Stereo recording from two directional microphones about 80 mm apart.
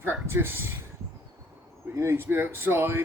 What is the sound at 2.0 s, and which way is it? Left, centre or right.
Speech, right.